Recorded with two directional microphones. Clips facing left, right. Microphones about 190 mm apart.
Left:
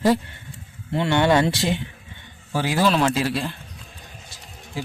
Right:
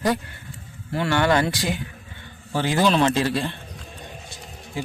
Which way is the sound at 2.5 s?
10° left (ahead or behind).